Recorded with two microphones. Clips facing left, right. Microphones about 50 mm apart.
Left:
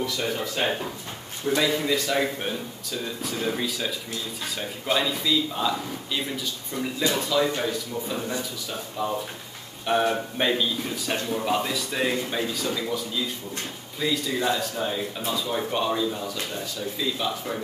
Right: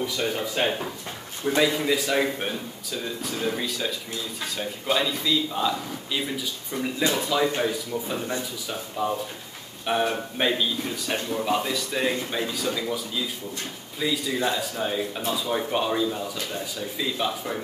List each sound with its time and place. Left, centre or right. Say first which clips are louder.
0.0 s speech: right 1 dB; centre
1.4 s a man's voice: right 2 dB; right
1.7 s speech: even; centre
3.2 s a man's voice: left 1 dB; centre
9.0 s a man's voice: right 1 dB; centre